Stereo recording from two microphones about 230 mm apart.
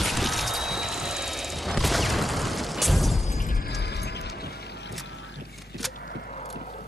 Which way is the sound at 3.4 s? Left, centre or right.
Left.